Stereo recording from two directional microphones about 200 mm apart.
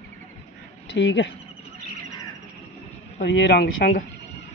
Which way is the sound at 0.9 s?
65° left (ahead or behind).